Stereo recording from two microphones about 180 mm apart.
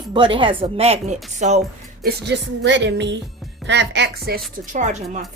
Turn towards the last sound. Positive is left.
turn(degrees=-40)  # may be behind; listen again after turning